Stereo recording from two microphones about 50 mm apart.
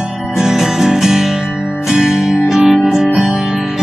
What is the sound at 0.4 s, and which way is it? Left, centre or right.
Music, centre.